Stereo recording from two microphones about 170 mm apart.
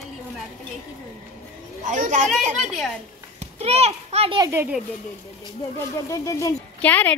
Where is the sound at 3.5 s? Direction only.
40° right (ahead or behind).